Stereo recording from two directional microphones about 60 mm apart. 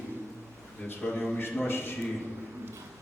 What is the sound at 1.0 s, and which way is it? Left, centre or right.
Speech, left.